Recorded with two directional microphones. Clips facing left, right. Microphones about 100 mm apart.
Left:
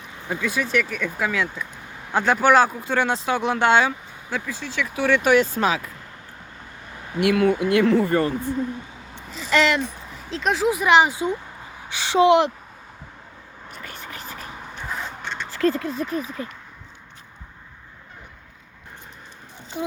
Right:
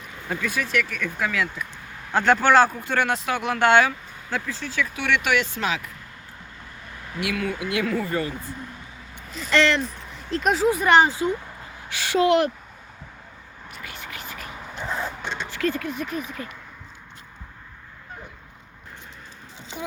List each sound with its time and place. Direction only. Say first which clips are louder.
0.3 s speech: left 2 dB; 20° left (ahead or behind)
4.9 s speech: left 7 dB; 35° left (ahead or behind)
7.2 s speech: left 9 dB; 55° left (ahead or behind)
9.3 s speech: left 2 dB; centre (ahead or behind)
9.6 s speech: even; 15° left (ahead or behind)
10.0 s speech: right 2 dB; centre (ahead or behind); by 12.5 s 20° left (ahead or behind)
13.7 s whispering: left 1 dB; 40° left (ahead or behind)
14.8 s a sound: right 2 dB; 15° right (ahead or behind)
15.4 s speech: left 5 dB; 30° left (ahead or behind)